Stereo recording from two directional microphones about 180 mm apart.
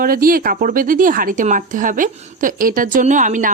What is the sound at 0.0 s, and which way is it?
Speech, 50° right (ahead or behind).